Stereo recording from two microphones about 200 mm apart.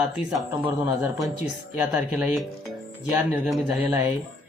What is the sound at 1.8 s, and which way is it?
Speech, 5° right (ahead or behind).